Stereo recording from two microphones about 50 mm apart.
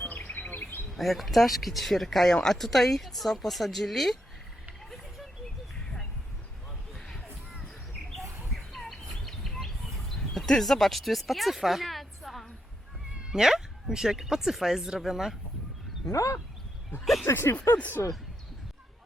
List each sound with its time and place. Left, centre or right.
0.3 s chirp: left
0.9 s speech: centre
8.4 s bird: centre
10.2 s speech: centre
13.1 s speech: centre
16.1 s speech: left
17.2 s speech: left
18.0 s speech: left